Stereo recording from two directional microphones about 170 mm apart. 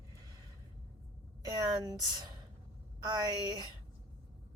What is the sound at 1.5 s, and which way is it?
Speech, 20° right (ahead or behind).